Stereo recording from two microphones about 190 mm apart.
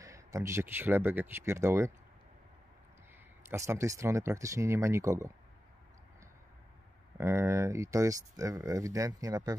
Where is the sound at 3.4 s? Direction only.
15° right (ahead or behind).